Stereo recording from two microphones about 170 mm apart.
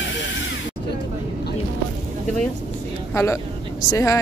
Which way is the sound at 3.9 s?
20° left (ahead or behind).